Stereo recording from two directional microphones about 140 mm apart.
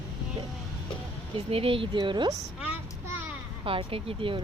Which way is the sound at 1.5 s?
40° right (ahead or behind).